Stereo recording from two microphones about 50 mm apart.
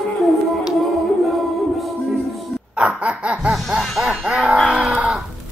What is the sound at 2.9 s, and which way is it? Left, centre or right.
Snicker, right.